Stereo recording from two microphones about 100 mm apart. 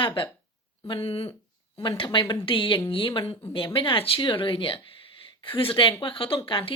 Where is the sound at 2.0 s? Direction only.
50° left (ahead or behind).